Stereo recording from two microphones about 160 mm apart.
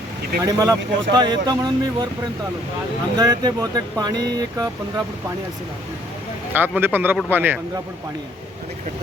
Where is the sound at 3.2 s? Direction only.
25° right (ahead or behind).